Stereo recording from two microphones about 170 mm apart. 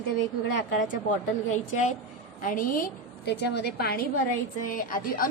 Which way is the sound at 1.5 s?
45° left (ahead or behind).